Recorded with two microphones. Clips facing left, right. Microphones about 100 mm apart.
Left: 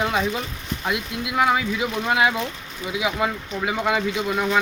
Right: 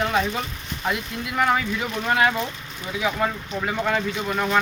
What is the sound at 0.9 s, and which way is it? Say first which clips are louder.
Speech: even; 5° left (ahead or behind).